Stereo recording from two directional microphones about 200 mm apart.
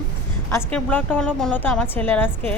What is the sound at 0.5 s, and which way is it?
A woman's voice, 10° left (ahead or behind).